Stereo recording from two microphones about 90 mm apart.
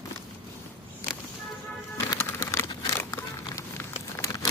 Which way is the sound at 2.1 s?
30° left (ahead or behind).